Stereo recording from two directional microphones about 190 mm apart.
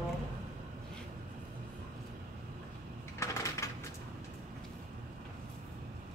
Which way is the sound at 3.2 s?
15° left (ahead or behind).